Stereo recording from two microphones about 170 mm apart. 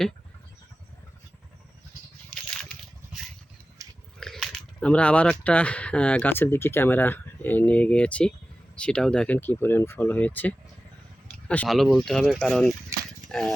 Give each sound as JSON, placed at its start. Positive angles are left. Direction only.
{"t": 3.8, "sound": "biting", "side_deg": -20}
{"t": 4.2, "sound": "speech", "side_deg": 0}
{"t": 12.9, "sound": "a sound", "side_deg": -20}
{"t": 13.2, "sound": "speech", "side_deg": 5}